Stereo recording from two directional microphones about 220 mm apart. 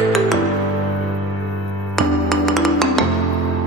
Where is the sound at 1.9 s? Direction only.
Centre (ahead or behind).